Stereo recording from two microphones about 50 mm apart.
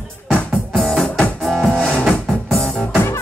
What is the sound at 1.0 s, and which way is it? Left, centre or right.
Music, centre.